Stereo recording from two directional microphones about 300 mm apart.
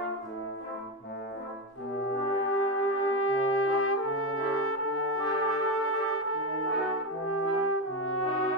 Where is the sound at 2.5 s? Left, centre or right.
Left.